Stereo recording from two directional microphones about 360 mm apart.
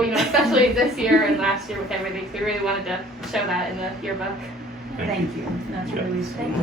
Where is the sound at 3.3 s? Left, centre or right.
Centre.